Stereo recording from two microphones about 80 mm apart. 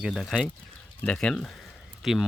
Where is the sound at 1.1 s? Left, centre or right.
Centre.